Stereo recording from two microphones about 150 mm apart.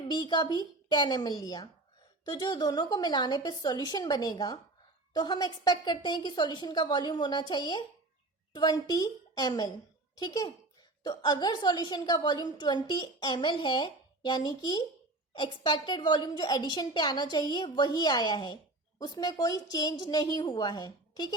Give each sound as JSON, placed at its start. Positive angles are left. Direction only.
{"t": 0.1, "sound": "a woman's voice", "side_deg": 30}